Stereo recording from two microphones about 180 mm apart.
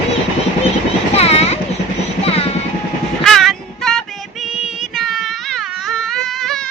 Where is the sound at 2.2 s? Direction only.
35° left (ahead or behind).